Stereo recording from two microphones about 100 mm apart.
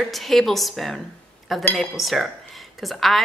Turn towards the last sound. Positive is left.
turn(degrees=0)  # may be behind; listen again after turning